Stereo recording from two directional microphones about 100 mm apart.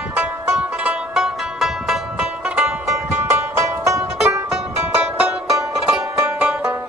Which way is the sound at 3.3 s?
30° right (ahead or behind).